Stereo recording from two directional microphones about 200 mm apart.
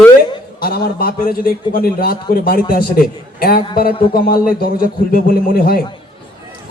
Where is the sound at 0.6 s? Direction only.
50° left (ahead or behind).